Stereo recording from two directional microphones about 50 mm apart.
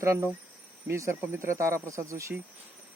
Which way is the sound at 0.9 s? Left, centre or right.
Right.